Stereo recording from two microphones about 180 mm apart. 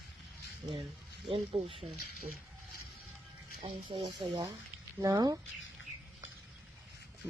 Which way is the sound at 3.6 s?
30° right (ahead or behind).